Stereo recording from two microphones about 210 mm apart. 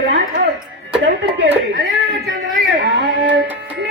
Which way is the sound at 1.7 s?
60° right (ahead or behind).